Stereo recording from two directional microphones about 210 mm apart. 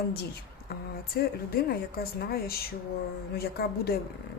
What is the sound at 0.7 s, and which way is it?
Speech, 45° left (ahead or behind).